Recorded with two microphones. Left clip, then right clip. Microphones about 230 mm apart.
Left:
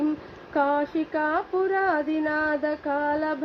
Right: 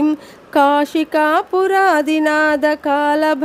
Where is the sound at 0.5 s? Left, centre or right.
Right.